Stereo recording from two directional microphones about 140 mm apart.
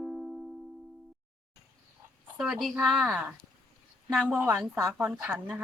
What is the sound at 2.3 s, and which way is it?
Speech, centre (ahead or behind).